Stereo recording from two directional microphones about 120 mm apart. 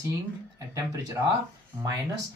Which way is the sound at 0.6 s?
30° right (ahead or behind).